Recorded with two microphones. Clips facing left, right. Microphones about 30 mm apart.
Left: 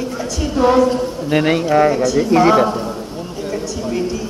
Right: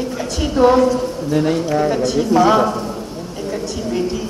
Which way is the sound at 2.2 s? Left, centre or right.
Left.